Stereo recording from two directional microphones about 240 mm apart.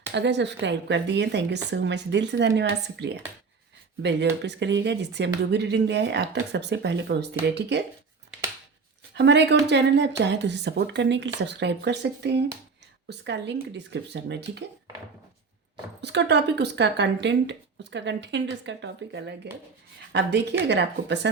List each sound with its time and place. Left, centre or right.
0.1 s speech: right
4.4 s speech: right
9.1 s speech: right
16.0 s speech: right